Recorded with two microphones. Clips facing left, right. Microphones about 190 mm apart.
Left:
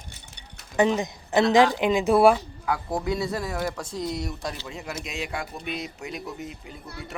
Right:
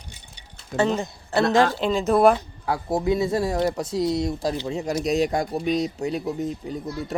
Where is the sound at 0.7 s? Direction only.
15° left (ahead or behind).